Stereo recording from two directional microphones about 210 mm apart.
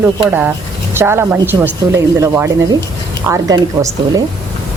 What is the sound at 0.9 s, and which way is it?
Speech, 10° right (ahead or behind).